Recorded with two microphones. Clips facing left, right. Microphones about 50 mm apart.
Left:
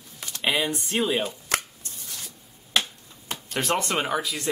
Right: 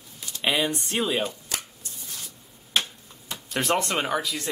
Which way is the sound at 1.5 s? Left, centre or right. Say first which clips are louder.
Left 7 dB; left.